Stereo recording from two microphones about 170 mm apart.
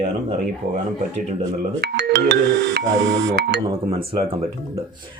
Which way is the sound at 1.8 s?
75° right (ahead or behind).